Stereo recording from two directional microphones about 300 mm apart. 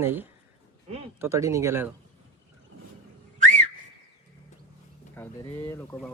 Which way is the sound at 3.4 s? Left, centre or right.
Right.